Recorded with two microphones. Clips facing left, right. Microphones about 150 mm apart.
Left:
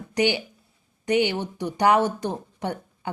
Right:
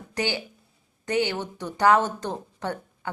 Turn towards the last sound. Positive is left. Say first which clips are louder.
# left 1 dB
turn(degrees=15)  # may be behind; listen again after turning